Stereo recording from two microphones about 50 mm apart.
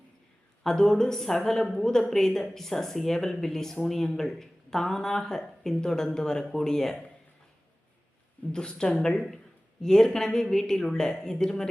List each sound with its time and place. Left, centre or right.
0.6 s a woman's voice: centre
8.5 s a woman's voice: centre